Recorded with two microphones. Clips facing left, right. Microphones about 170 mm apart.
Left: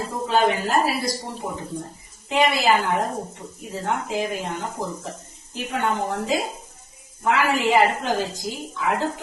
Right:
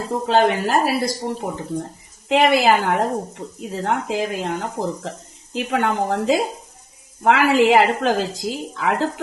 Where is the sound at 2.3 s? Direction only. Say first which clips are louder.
Right 4 dB; 70° right (ahead or behind).